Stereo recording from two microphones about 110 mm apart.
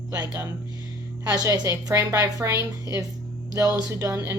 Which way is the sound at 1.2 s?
35° right (ahead or behind).